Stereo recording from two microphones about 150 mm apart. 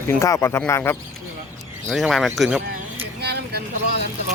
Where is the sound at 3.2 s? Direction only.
90° right.